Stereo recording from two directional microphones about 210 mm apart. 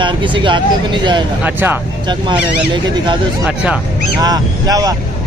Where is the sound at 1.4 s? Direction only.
10° right (ahead or behind).